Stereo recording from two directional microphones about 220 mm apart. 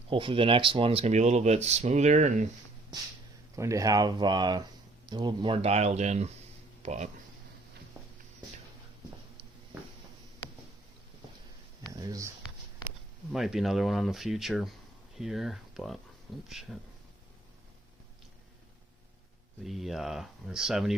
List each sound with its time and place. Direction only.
0.1 s speech: 25° right (ahead or behind)
3.5 s speech: 15° right (ahead or behind); by 7.1 s 35° right (ahead or behind)
11.9 s a sound: 15° right (ahead or behind)
13.3 s speech: centre (ahead or behind)
19.6 s speech: centre (ahead or behind)